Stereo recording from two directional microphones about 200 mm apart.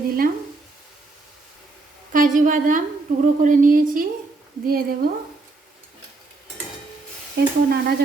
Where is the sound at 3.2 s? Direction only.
40° right (ahead or behind).